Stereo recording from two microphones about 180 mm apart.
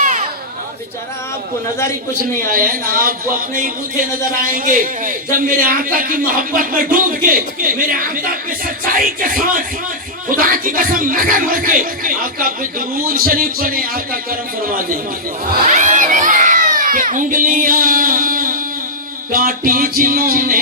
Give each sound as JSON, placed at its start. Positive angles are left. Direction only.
{"t": 0.0, "sound": "a sound", "side_deg": -40}
{"t": 2.5, "sound": "speech", "side_deg": -50}
{"t": 15.6, "sound": "crowd", "side_deg": -45}
{"t": 19.3, "sound": "speech", "side_deg": -50}